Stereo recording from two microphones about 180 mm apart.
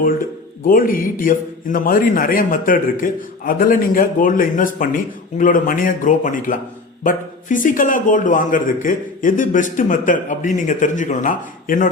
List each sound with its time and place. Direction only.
0.7 s a man's voice: 50° left (ahead or behind)